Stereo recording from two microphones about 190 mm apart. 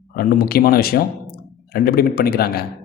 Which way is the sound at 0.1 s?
50° left (ahead or behind).